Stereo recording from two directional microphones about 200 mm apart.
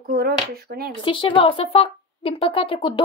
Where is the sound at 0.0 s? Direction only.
50° right (ahead or behind).